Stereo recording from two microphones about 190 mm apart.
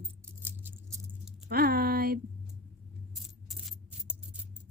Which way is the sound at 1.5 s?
55° right (ahead or behind).